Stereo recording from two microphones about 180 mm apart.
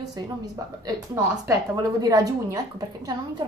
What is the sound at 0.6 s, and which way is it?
A woman's voice, 20° right (ahead or behind).